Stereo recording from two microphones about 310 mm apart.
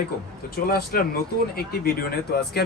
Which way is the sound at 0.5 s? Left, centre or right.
Left.